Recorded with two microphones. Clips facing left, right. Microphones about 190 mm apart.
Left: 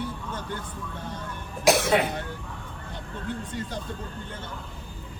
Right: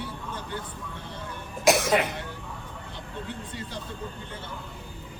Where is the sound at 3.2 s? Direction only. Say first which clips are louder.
Left 4 dB; 50° left (ahead or behind).